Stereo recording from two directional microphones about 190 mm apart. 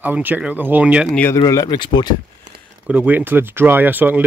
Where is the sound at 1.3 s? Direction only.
20° left (ahead or behind).